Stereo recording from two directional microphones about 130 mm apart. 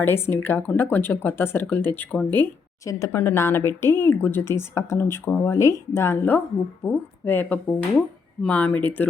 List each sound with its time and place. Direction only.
0.0 s speech: 15° left (ahead or behind)